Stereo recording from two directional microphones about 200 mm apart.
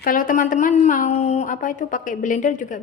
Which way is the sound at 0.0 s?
45° left (ahead or behind).